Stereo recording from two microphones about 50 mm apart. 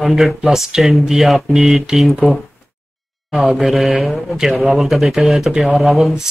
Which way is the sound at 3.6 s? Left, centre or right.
Centre.